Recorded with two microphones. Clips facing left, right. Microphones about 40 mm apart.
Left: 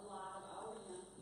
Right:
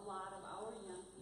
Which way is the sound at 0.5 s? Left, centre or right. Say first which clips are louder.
Right 1 dB; centre.